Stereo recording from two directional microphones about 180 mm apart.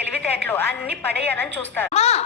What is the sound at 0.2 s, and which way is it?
A woman's voice, 10° left (ahead or behind).